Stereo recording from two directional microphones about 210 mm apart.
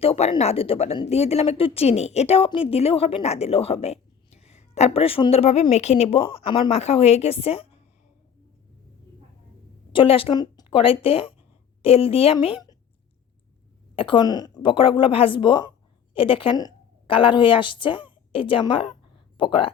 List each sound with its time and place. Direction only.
0.0 s a woman's voice: 25° left (ahead or behind)
9.9 s a woman's voice: 25° left (ahead or behind)
13.9 s a woman's voice: 25° left (ahead or behind)